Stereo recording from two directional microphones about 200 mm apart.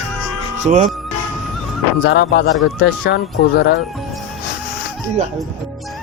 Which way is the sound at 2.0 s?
55° left (ahead or behind).